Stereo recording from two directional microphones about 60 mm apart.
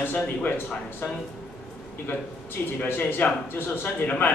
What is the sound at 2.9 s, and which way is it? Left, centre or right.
A man's voice, left.